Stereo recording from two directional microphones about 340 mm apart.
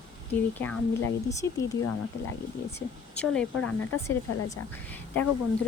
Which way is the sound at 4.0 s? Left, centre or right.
Centre.